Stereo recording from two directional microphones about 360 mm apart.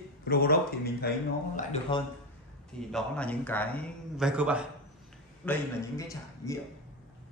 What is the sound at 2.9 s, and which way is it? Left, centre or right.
A man's voice, centre.